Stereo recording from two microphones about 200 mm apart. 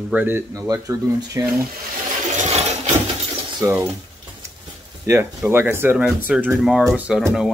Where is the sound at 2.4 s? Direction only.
35° right (ahead or behind).